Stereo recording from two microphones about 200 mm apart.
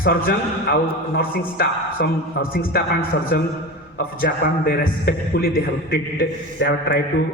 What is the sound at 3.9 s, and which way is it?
A man's voice, 50° left (ahead or behind).